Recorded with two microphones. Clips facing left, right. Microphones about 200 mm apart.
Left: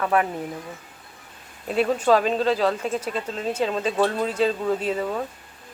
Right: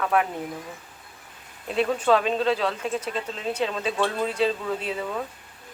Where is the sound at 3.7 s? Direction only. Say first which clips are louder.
Left 4 dB; 35° left (ahead or behind).